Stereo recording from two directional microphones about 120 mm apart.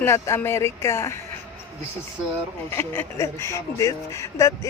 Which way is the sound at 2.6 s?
20° left (ahead or behind).